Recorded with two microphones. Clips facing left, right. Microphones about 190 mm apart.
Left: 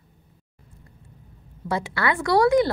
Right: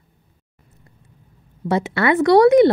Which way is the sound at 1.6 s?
20° right (ahead or behind).